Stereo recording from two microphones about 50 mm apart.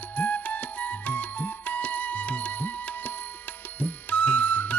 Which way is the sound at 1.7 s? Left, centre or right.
Left.